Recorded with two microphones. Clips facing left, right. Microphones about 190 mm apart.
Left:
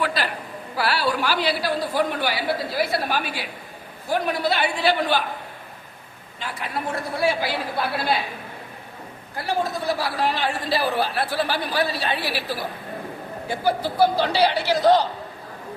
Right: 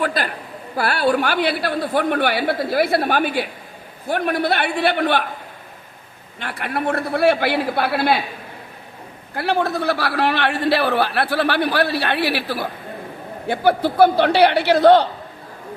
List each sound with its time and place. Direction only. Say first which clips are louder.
0.0 s a sound: right 3 dB; 50° right (ahead or behind)
0.8 s a man's voice: right 5 dB; 50° right (ahead or behind)
6.4 s a man's voice: right 5 dB; 65° right (ahead or behind)
9.3 s a man's voice: right 5 dB; 65° right (ahead or behind)